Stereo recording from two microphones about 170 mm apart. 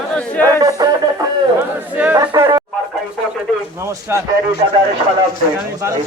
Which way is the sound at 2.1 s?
20° right (ahead or behind).